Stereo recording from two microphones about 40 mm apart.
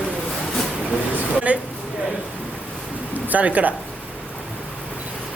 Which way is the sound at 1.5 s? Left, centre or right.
Right.